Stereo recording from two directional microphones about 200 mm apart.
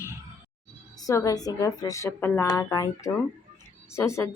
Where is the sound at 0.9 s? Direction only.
15° left (ahead or behind).